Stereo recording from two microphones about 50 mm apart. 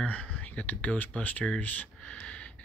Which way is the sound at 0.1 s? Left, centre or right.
Left.